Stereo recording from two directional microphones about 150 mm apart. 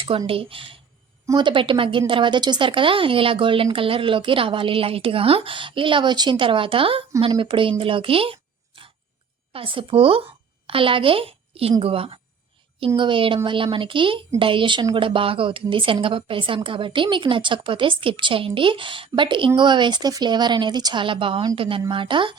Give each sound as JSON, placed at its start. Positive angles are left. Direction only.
{"t": 0.0, "sound": "a woman's voice", "side_deg": -35}